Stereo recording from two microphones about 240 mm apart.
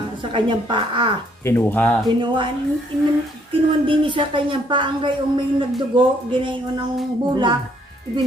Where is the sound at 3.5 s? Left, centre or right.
Right.